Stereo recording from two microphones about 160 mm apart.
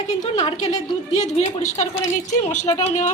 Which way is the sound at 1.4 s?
40° left (ahead or behind).